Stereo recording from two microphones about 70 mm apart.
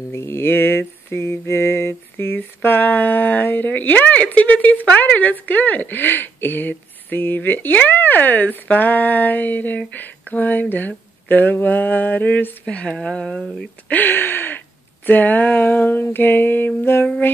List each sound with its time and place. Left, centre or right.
0.1 s mantra: left
12.6 s speech: centre
13.8 s mantra: left